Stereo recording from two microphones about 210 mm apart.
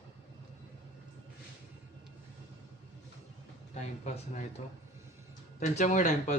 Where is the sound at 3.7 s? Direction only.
35° left (ahead or behind).